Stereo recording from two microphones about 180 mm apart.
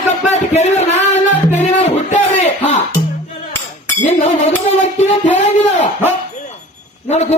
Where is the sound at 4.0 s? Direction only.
40° left (ahead or behind).